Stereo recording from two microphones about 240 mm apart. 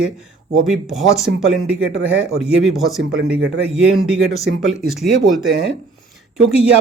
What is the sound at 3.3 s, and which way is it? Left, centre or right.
Speech, right.